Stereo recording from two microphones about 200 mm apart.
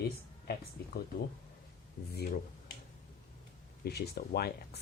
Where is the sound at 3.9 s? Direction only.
50° left (ahead or behind).